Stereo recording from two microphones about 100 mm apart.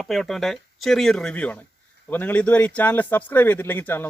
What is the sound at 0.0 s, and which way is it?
Speech, 5° left (ahead or behind).